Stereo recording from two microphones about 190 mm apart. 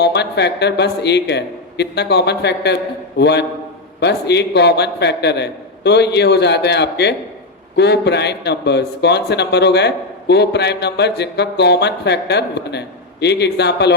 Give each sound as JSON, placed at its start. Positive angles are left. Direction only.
{"t": 0.0, "sound": "a man's voice", "side_deg": 60}